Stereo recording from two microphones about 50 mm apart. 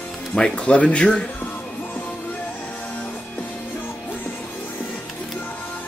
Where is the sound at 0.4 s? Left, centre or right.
Left.